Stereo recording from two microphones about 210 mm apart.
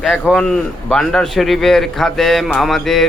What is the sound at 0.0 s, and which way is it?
A man's voice, centre (ahead or behind).